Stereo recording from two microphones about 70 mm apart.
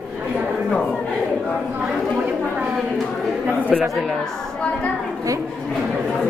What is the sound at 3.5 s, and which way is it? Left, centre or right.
Chatter, right.